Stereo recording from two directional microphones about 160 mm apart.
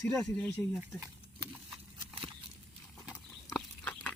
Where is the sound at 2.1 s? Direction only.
35° right (ahead or behind).